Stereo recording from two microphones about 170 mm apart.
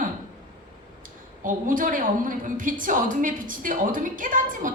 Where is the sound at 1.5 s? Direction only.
50° right (ahead or behind).